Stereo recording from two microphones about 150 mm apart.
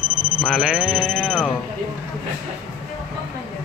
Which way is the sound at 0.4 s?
5° left (ahead or behind).